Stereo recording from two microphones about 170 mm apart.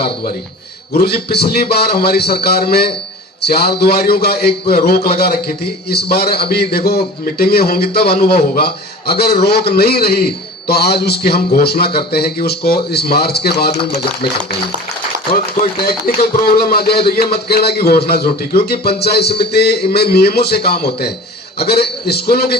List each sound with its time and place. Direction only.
0.9 s a man's voice: 70° left (ahead or behind)
15.8 s a man's voice: 60° left (ahead or behind)